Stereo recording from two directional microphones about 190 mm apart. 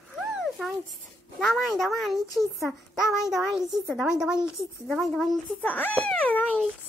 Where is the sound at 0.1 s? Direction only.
Centre (ahead or behind).